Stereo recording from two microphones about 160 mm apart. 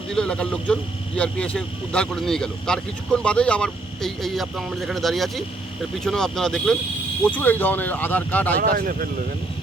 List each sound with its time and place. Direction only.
0.1 s speech: 5° left (ahead or behind)
8.5 s speech: 65° right (ahead or behind)